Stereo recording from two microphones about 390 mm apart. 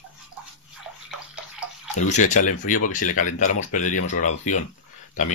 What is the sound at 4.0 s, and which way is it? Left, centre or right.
Speech, centre.